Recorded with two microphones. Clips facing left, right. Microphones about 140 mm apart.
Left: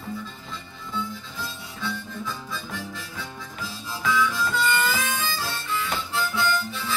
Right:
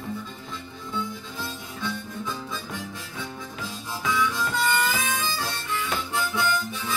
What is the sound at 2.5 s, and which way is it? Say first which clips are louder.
Harmonica: even; 20° right (ahead or behind).